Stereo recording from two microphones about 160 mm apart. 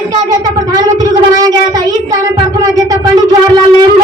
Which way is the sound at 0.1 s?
25° right (ahead or behind).